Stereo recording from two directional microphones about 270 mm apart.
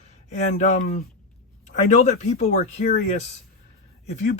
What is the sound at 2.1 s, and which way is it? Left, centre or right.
Speech, left.